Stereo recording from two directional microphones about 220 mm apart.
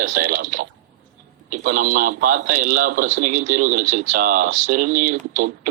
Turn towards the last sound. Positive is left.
turn(degrees=-35)  # may be behind; listen again after turning